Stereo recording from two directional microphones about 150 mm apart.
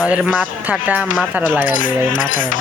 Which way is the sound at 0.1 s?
5° right (ahead or behind).